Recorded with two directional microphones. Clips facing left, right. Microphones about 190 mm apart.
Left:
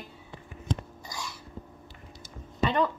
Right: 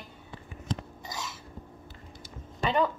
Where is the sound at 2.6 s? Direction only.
10° right (ahead or behind).